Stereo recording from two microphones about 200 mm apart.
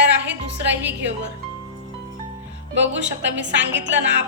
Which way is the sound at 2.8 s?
65° right (ahead or behind).